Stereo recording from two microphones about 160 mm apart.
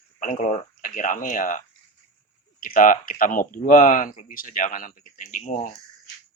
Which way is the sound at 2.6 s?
60° left (ahead or behind).